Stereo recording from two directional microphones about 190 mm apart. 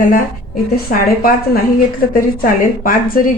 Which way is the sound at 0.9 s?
50° left (ahead or behind).